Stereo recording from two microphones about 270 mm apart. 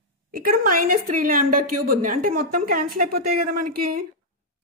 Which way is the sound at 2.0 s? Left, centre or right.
Right.